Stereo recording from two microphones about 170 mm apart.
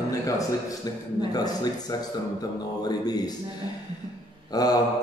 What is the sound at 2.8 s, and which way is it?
Speech, 25° left (ahead or behind).